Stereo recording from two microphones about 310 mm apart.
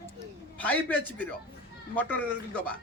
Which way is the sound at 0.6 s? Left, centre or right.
Centre.